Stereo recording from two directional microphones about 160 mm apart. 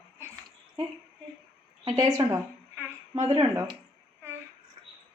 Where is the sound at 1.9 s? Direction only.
20° right (ahead or behind).